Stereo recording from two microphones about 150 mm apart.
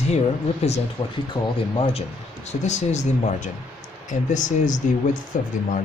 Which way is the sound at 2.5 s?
50° left (ahead or behind).